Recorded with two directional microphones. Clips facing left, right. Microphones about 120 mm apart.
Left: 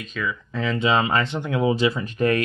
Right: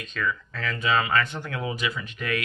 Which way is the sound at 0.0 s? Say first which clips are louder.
Left 1 dB; 5° left (ahead or behind).